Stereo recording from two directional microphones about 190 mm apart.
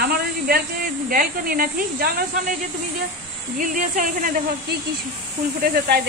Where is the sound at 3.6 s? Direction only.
45° right (ahead or behind).